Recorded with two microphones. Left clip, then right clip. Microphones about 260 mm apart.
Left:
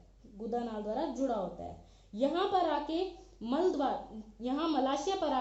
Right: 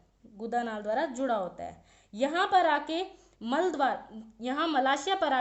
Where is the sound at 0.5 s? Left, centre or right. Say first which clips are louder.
Right 6 dB; right.